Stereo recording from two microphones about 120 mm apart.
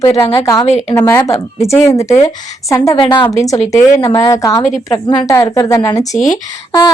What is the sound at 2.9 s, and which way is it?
Speech, 45° left (ahead or behind).